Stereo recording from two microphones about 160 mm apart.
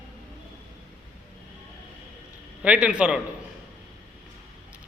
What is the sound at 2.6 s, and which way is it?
Speech, 5° right (ahead or behind).